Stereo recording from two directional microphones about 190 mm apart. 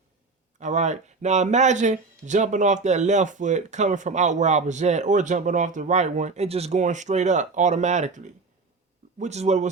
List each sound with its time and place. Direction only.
0.6 s speech: 40° right (ahead or behind)